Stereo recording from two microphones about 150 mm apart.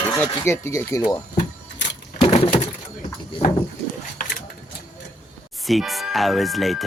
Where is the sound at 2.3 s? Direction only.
40° left (ahead or behind).